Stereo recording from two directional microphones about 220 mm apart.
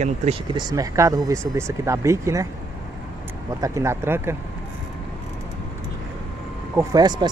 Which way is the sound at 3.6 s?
15° right (ahead or behind).